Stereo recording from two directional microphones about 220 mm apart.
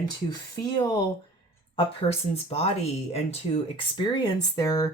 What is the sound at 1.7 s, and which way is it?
Speech, 25° left (ahead or behind).